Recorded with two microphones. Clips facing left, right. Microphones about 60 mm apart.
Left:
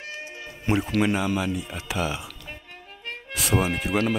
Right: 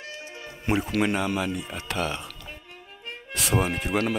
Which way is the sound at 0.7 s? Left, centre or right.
Centre.